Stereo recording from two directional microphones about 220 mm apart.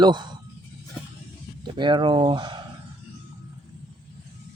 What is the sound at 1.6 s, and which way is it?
Speech, 20° right (ahead or behind).